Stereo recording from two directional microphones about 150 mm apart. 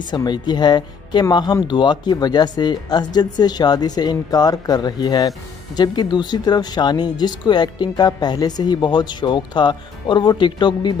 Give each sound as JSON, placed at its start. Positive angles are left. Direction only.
{"t": 0.1, "sound": "speech", "side_deg": 30}